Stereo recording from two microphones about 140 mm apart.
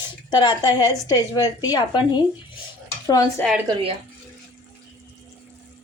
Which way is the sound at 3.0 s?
25° left (ahead or behind).